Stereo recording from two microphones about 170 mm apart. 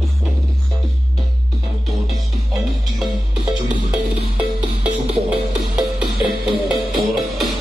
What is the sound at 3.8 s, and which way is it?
Music, 5° right (ahead or behind).